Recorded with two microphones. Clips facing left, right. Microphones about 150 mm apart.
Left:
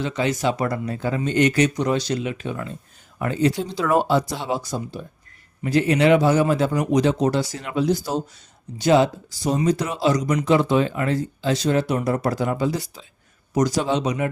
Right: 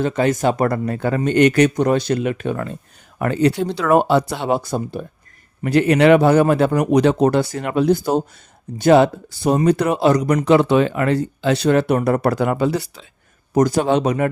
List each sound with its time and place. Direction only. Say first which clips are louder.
0.0 s speech: right 5 dB; 50° right (ahead or behind)
13.5 s speech: right 5 dB; 55° right (ahead or behind)